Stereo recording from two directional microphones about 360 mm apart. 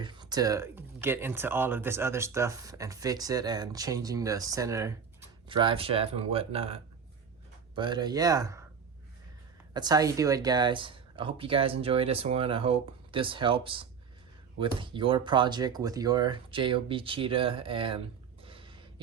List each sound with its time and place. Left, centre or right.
0.0 s speech: centre
9.7 s speech: centre
18.4 s a sound: centre